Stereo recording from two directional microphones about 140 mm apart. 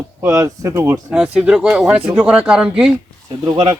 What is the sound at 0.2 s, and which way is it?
Speech, 20° right (ahead or behind).